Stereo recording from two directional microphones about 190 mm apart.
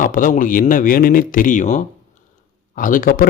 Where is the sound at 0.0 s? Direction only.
45° left (ahead or behind).